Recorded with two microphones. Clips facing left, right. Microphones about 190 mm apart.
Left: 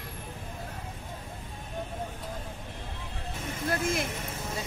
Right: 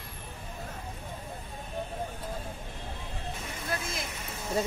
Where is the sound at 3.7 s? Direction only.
50° left (ahead or behind).